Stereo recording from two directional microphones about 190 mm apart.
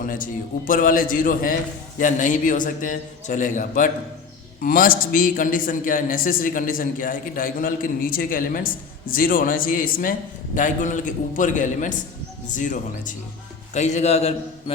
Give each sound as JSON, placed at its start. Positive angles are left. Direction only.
{"t": 0.0, "sound": "a man's voice", "side_deg": 45}